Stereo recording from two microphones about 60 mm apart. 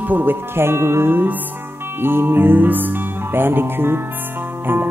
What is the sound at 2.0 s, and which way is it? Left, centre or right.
Music, right.